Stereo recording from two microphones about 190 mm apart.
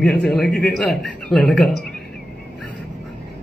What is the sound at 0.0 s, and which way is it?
Speech, 5° left (ahead or behind).